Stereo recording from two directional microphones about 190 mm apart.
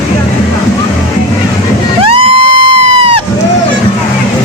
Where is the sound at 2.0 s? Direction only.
30° right (ahead or behind).